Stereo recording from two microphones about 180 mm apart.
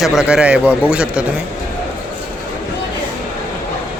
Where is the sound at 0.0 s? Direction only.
5° right (ahead or behind).